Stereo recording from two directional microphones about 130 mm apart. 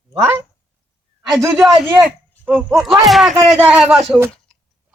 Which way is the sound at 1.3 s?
25° right (ahead or behind).